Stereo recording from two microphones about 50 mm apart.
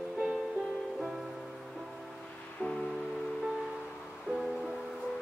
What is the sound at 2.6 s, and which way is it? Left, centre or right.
Music, left.